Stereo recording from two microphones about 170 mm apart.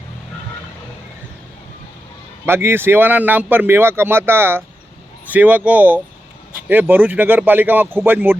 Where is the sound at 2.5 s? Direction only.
15° right (ahead or behind).